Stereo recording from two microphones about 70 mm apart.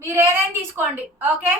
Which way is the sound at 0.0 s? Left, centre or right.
Right.